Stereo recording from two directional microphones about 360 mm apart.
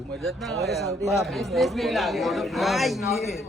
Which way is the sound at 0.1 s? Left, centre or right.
Centre.